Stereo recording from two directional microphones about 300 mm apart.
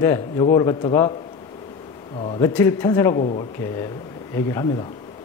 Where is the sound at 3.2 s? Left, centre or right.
Left.